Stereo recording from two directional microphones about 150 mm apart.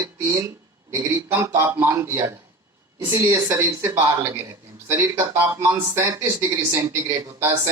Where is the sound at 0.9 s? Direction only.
15° right (ahead or behind).